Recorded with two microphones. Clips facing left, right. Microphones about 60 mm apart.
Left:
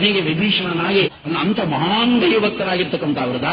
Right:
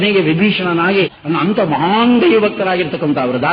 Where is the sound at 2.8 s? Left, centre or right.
Right.